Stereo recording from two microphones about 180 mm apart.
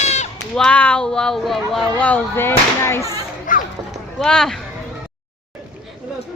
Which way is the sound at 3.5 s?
45° left (ahead or behind).